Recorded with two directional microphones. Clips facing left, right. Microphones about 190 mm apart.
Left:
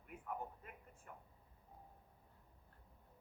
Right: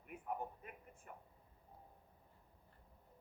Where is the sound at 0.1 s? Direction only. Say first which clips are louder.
Right 3 dB; 15° right (ahead or behind).